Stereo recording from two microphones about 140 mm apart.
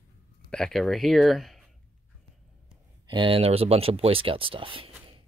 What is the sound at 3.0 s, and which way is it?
Speech, 35° right (ahead or behind).